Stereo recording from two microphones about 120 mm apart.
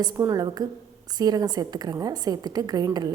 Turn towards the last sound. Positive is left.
turn(degrees=-35)  # may be behind; listen again after turning